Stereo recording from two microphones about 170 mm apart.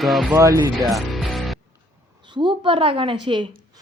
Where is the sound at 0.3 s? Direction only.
15° right (ahead or behind).